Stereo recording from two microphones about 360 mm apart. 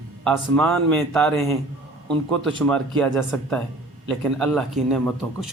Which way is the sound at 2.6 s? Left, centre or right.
Centre.